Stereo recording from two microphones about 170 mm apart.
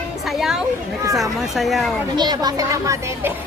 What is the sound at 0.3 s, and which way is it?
Speech, centre (ahead or behind).